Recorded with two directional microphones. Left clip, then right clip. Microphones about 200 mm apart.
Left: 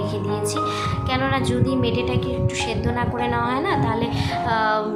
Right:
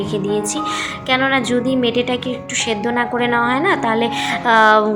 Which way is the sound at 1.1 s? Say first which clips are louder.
Right 8 dB; 20° right (ahead or behind).